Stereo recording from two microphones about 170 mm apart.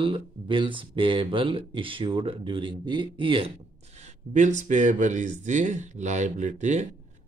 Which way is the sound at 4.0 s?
45° right (ahead or behind).